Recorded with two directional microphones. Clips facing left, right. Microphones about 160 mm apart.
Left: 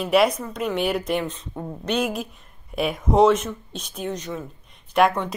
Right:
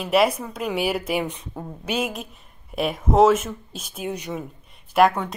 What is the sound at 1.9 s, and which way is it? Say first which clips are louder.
A woman's voice: left 2 dB; centre (ahead or behind).